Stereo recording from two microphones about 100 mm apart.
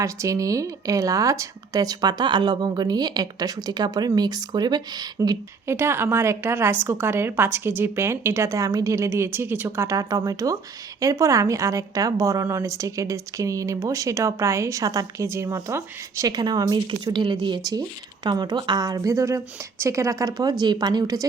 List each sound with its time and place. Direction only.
0.0 s speech: 30° right (ahead or behind)
5.6 s a woman's voice: 25° right (ahead or behind)
16.3 s speech: 45° right (ahead or behind)